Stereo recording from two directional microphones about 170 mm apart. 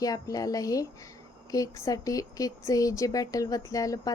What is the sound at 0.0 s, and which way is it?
Speech, 20° left (ahead or behind).